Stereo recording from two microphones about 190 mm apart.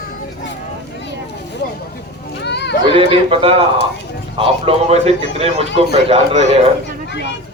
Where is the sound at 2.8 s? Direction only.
30° right (ahead or behind).